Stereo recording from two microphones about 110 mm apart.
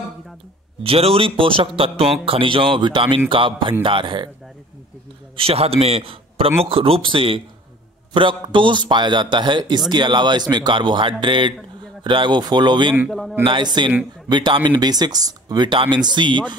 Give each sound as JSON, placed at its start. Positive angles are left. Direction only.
{"t": 0.8, "sound": "a man's voice", "side_deg": -60}
{"t": 5.3, "sound": "a man's voice", "side_deg": -60}